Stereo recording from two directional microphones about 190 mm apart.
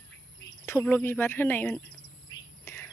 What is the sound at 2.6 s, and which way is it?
Whispering, 10° left (ahead or behind).